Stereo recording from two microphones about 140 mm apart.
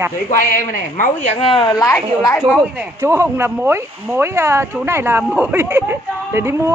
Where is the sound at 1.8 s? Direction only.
20° left (ahead or behind).